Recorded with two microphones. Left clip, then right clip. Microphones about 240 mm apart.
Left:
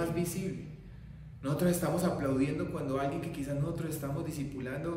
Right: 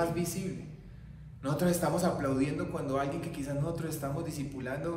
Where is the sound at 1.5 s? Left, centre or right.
Centre.